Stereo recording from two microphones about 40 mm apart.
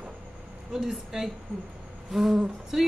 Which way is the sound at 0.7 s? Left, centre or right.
Centre.